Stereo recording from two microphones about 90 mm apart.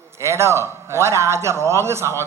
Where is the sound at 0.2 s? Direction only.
30° right (ahead or behind).